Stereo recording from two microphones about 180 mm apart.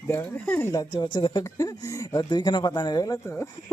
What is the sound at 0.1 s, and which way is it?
Speech, 10° left (ahead or behind).